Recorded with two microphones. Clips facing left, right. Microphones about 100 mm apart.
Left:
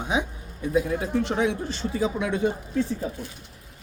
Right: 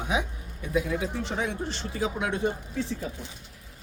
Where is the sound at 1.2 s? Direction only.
85° left.